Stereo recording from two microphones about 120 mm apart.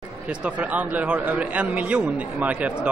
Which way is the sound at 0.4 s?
10° right (ahead or behind).